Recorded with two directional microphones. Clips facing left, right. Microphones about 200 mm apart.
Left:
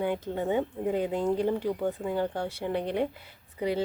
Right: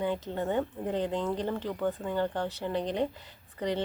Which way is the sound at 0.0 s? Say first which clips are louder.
Left 2 dB; 10° left (ahead or behind).